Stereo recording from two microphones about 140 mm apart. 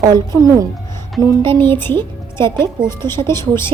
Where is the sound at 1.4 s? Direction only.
15° left (ahead or behind).